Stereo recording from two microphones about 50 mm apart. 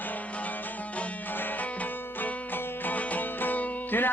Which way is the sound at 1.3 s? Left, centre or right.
Left.